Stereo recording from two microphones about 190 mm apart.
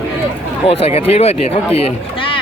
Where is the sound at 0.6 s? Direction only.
30° left (ahead or behind).